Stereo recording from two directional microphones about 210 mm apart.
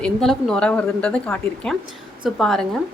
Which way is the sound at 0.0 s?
Centre (ahead or behind).